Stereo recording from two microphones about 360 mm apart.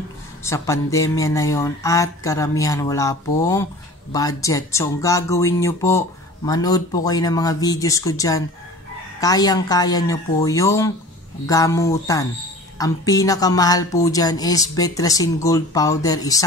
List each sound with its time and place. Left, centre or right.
0.4 s speech: centre